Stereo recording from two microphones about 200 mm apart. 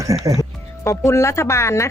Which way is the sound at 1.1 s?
15° left (ahead or behind).